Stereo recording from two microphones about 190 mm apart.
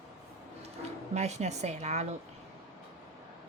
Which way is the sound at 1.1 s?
35° right (ahead or behind).